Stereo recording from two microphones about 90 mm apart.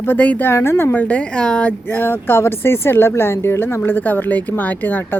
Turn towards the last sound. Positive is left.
turn(degrees=20)  # may be behind; listen again after turning